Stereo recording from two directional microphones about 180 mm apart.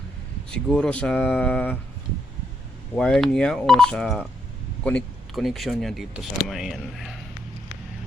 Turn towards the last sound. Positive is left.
turn(degrees=0)  # may be behind; listen again after turning